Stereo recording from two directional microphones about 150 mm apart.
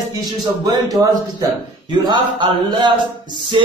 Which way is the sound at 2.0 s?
30° right (ahead or behind).